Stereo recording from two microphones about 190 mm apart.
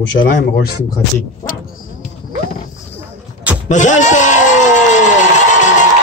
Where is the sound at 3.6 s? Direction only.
40° left (ahead or behind).